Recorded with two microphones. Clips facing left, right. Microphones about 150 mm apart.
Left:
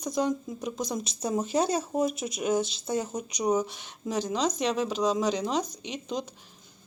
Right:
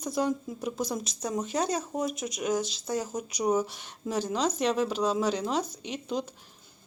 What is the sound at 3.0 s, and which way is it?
Speech, 5° right (ahead or behind).